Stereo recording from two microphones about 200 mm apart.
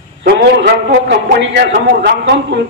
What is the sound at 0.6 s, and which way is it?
A man's voice, 65° right (ahead or behind).